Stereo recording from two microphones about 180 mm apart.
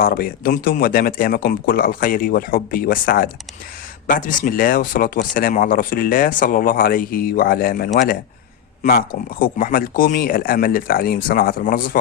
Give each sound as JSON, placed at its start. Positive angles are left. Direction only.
{"t": 0.0, "sound": "speech", "side_deg": 55}